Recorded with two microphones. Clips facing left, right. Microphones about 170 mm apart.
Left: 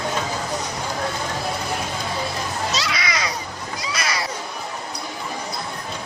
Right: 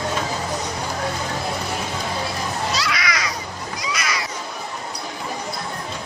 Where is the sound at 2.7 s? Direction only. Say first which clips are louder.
Right 1 dB; 25° left (ahead or behind).